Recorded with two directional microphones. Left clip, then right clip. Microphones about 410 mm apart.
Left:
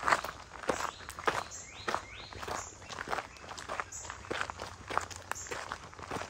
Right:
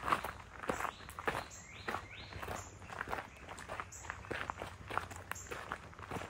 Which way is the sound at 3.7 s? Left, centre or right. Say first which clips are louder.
Left 6 dB; centre.